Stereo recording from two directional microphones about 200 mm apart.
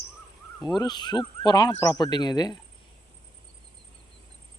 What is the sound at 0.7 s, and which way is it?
Speech, 20° left (ahead or behind).